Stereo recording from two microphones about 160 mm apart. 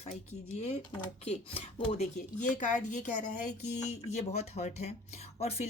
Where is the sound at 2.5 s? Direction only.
50° left (ahead or behind).